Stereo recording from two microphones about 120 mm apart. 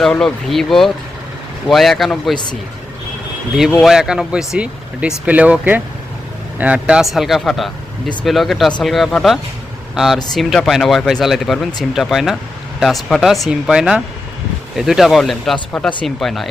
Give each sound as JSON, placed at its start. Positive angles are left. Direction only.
{"t": 0.0, "sound": "speech", "side_deg": 5}
{"t": 2.3, "sound": "a man's voice", "side_deg": 40}
{"t": 3.8, "sound": "speech", "side_deg": -5}